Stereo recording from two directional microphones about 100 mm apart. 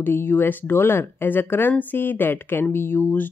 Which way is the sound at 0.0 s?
20° left (ahead or behind).